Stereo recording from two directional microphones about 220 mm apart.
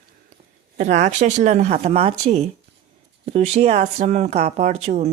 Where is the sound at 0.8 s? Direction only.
30° right (ahead or behind).